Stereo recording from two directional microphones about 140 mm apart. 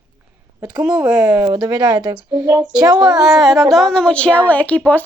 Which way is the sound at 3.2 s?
Centre (ahead or behind).